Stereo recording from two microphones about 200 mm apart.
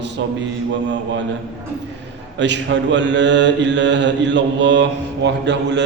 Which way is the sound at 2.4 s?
65° right (ahead or behind).